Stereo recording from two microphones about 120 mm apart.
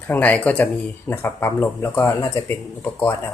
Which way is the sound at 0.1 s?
15° left (ahead or behind).